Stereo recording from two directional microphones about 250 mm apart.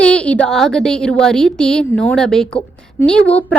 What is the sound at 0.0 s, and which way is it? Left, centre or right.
A woman's voice, centre.